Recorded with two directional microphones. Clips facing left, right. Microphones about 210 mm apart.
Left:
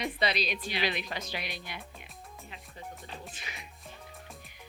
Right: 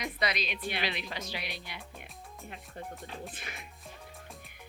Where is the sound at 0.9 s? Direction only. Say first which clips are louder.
Left 3 dB; 50° left (ahead or behind).